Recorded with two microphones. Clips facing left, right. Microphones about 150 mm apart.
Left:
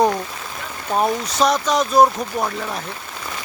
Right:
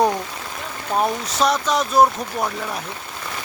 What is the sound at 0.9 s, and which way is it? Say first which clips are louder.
Speech: left 2 dB; centre (ahead or behind).